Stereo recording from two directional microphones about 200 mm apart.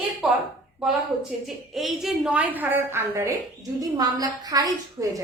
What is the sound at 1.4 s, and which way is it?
A woman's voice, centre (ahead or behind).